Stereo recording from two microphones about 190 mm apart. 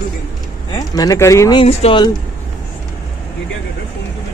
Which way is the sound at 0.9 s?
20° left (ahead or behind).